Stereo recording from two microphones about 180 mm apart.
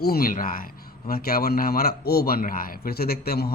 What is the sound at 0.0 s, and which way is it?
A man's voice, 55° left (ahead or behind).